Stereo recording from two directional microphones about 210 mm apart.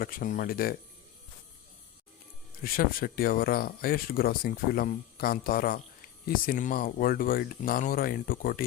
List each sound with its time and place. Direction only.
0.0 s speech: 40° left (ahead or behind)
2.6 s speech: 45° left (ahead or behind)